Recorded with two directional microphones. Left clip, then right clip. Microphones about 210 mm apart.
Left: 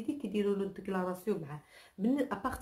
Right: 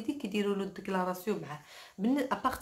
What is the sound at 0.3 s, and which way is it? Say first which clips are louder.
Speech: left 1 dB; 5° right (ahead or behind).